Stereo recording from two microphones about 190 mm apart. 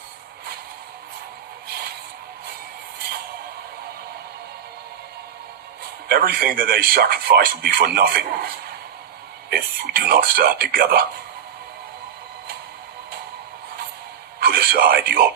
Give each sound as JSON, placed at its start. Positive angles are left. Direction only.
{"t": 6.1, "sound": "a man's voice", "side_deg": -50}
{"t": 14.3, "sound": "speech", "side_deg": -50}